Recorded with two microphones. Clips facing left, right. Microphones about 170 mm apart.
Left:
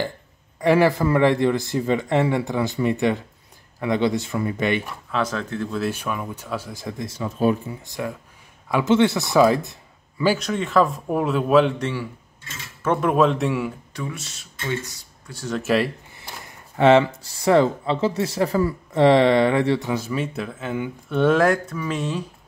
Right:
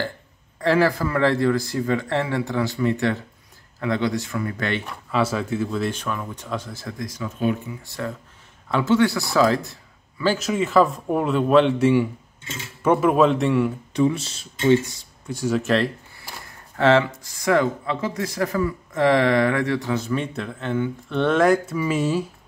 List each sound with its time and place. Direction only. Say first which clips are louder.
0.6 s speech: left 2 dB; 15° left (ahead or behind)
4.8 s speech: right 2 dB; 5° right (ahead or behind); by 7.5 s 35° left (ahead or behind)
7.8 s speech: left 1 dB; 15° left (ahead or behind)
10.4 s speech: right 1 dB; 5° right (ahead or behind)
11.8 s speech: right 9 dB; 15° right (ahead or behind)
12.8 s speech: right 2 dB; 5° right (ahead or behind)
13.9 s speech: right 11 dB; 25° right (ahead or behind)
15.3 s speech: right 5 dB; 10° right (ahead or behind)
15.6 s speech: left 3 dB; 5° left (ahead or behind)
16.7 s speech: left 3 dB; 15° left (ahead or behind)
17.0 s speech: left 3 dB; 30° left (ahead or behind)
19.9 s speech: right 1 dB; 10° left (ahead or behind)